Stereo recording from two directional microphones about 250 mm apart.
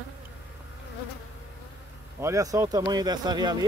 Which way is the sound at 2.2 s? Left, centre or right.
Centre.